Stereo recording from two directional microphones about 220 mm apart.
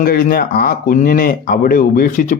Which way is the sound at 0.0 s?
40° left (ahead or behind).